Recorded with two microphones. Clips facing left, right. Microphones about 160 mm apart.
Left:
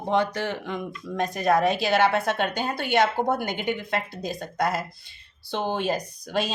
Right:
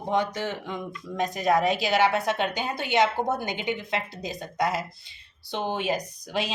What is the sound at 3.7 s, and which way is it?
Speech, 55° left (ahead or behind).